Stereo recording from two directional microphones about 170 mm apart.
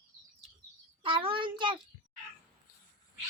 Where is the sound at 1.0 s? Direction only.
30° right (ahead or behind).